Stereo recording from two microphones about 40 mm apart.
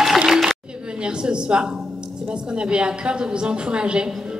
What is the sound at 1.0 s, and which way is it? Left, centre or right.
A woman's voice, right.